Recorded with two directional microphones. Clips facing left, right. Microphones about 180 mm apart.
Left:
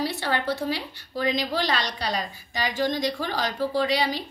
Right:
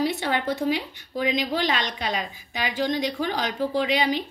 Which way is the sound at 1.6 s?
40° left (ahead or behind).